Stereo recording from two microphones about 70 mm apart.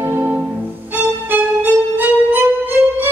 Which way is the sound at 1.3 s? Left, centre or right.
Right.